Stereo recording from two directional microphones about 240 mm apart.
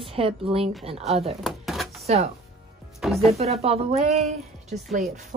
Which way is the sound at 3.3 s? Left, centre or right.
Right.